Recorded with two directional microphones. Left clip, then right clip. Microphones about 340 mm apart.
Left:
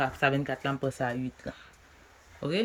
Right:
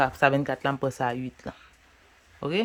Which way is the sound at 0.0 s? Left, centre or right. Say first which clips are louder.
Right 5 dB; centre.